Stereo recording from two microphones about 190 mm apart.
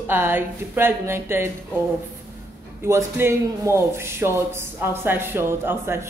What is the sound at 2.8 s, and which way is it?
A man's voice, 15° right (ahead or behind).